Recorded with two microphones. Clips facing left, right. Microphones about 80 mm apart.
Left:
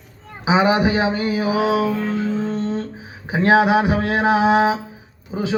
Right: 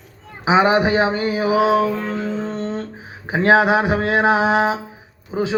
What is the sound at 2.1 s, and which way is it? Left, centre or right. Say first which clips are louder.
Music: left 2 dB; right.